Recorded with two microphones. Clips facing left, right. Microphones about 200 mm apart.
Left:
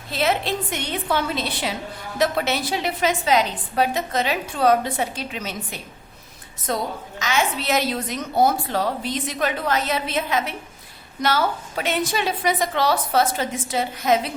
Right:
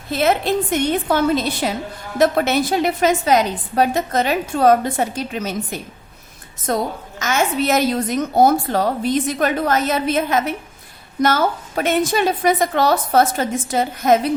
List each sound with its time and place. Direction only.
0.1 s a woman's voice: 50° right (ahead or behind)